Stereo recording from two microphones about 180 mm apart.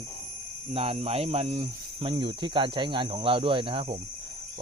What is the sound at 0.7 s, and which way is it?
Speech, 35° right (ahead or behind).